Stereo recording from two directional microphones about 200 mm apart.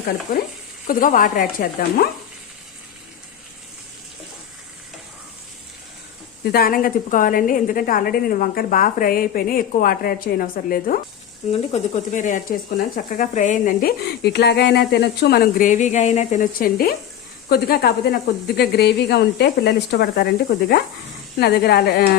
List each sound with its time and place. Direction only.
0.3 s speech: 45° left (ahead or behind)
6.4 s speech: 50° left (ahead or behind)